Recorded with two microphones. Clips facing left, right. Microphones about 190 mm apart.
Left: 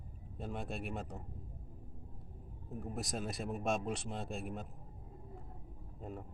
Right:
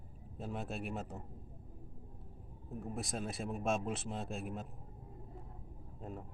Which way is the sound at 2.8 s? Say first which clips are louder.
Even; centre (ahead or behind).